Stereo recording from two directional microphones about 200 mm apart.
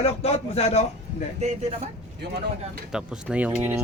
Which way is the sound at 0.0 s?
30° left (ahead or behind).